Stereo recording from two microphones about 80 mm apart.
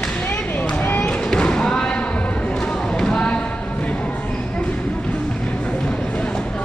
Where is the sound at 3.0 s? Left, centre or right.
Centre.